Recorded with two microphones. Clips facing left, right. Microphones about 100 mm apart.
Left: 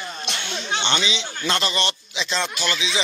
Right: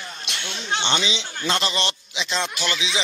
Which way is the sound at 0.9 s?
25° right (ahead or behind).